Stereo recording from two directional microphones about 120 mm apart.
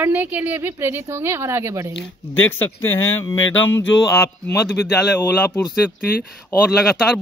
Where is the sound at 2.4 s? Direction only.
20° left (ahead or behind).